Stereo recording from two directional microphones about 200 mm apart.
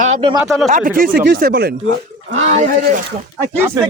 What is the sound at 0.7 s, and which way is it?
Speech, 40° right (ahead or behind).